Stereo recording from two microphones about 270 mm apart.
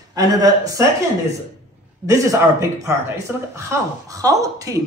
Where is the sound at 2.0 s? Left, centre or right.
Centre.